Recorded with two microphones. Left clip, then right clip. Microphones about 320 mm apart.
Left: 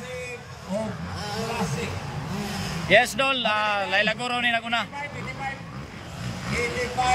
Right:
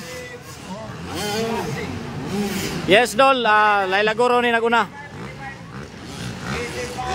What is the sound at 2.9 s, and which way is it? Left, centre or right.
Speech, centre.